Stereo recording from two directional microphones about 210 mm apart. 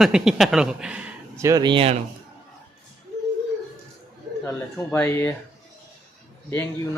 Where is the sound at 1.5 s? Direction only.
20° right (ahead or behind).